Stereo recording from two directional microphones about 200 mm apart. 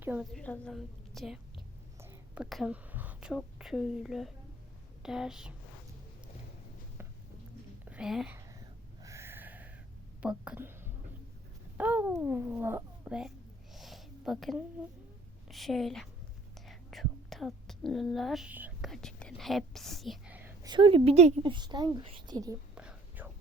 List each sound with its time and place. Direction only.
0.0 s a woman's voice: 10° right (ahead or behind)
0.3 s a woman's voice: 5° left (ahead or behind)
7.9 s speech: 5° right (ahead or behind)
9.0 s a sound: 15° right (ahead or behind)
10.2 s a child's voice: 5° right (ahead or behind)
13.7 s a sound: centre (ahead or behind)
15.4 s a woman's voice: centre (ahead or behind)
16.6 s whispering: centre (ahead or behind)
20.7 s speech: 25° right (ahead or behind)
22.7 s whispering: 5° right (ahead or behind)